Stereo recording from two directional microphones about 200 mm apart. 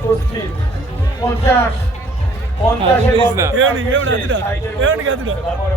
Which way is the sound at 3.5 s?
75° right (ahead or behind).